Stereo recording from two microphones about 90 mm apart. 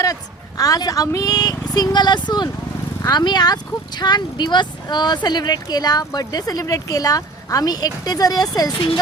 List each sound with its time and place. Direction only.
0.0 s a woman's voice: 40° left (ahead or behind)